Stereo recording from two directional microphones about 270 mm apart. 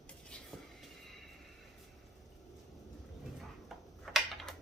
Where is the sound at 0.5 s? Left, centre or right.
Centre.